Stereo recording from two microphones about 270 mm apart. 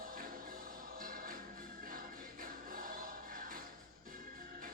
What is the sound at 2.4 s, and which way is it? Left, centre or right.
Music, right.